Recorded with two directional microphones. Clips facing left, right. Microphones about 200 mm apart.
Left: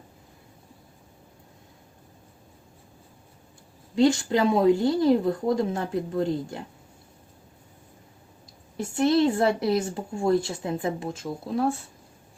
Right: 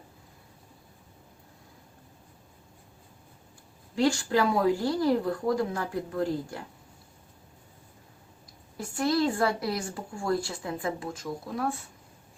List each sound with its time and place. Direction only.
3.9 s a woman's voice: 20° left (ahead or behind)
8.8 s a woman's voice: 25° left (ahead or behind)